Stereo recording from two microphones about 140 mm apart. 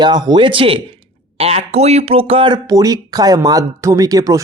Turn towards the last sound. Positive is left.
turn(degrees=-25)  # may be behind; listen again after turning